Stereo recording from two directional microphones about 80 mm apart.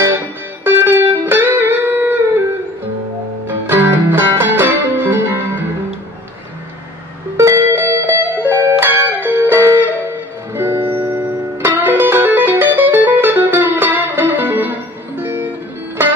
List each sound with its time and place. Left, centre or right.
0.7 s music: right
3.4 s music: right
7.3 s music: right